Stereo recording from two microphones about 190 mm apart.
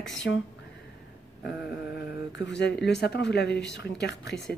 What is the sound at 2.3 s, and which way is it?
Speech, 65° left (ahead or behind).